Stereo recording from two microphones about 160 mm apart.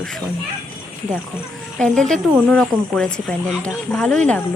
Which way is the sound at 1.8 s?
5° left (ahead or behind).